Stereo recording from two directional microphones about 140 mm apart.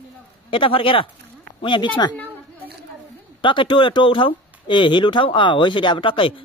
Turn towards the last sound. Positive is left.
turn(degrees=40)  # may be behind; listen again after turning